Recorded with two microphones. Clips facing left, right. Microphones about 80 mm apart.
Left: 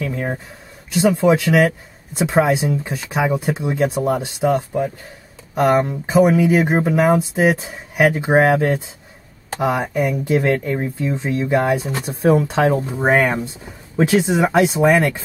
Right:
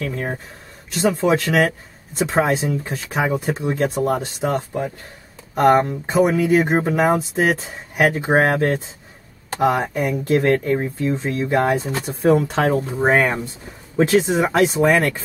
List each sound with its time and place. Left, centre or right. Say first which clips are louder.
0.0 s a sound: left 2 dB; centre
0.9 s speech: left 3 dB; centre
10.2 s speech: right 4 dB; centre